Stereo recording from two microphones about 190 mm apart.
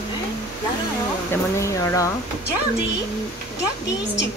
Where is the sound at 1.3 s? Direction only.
15° left (ahead or behind).